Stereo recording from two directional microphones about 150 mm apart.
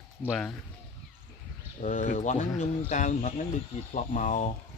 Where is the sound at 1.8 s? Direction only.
55° left (ahead or behind).